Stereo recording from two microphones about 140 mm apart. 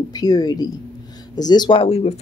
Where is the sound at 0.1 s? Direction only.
25° left (ahead or behind).